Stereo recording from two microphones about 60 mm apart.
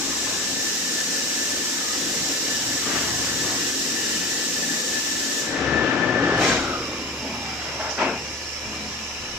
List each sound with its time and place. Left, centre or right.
5.5 s train: centre
6.4 s vehicle: centre